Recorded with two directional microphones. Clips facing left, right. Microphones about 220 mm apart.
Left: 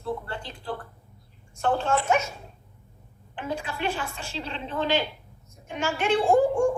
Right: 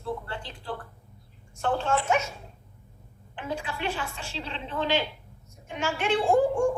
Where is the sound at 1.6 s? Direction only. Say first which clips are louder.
Left 2 dB; 45° left (ahead or behind).